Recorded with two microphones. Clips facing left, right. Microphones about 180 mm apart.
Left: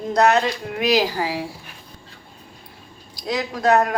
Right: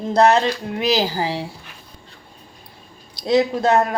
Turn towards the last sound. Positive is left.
turn(degrees=-25)  # may be behind; listen again after turning